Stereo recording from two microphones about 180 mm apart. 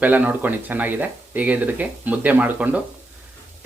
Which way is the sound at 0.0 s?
10° right (ahead or behind).